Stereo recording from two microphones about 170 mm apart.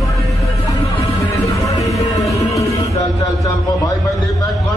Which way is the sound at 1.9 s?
20° left (ahead or behind).